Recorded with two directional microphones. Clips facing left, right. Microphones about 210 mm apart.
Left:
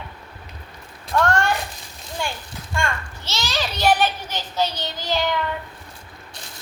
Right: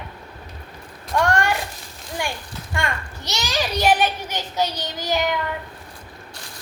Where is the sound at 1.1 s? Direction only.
15° right (ahead or behind).